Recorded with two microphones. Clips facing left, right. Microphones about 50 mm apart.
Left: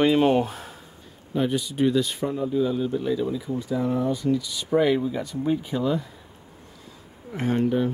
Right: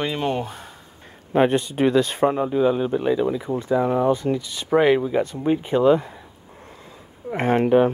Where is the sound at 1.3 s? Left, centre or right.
Right.